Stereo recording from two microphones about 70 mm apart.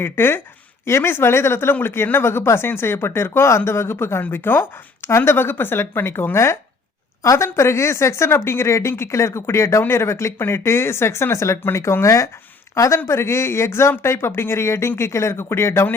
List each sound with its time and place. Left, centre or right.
0.0 s speech: left